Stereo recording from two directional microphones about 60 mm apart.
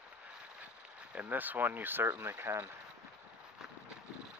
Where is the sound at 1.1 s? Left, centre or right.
Right.